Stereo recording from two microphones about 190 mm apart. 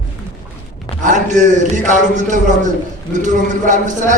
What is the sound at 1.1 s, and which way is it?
A man's voice, 40° right (ahead or behind).